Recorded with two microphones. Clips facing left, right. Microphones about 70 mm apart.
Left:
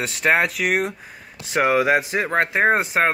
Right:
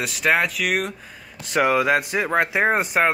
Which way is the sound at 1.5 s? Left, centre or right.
Centre.